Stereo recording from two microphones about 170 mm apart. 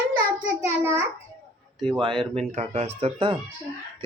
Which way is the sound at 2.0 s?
30° right (ahead or behind).